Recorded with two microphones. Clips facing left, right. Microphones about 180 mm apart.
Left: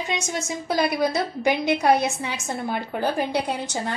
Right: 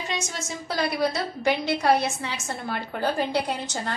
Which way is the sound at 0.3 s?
15° left (ahead or behind).